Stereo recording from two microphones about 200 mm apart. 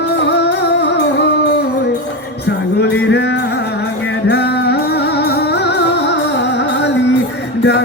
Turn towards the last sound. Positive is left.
turn(degrees=60)  # may be behind; listen again after turning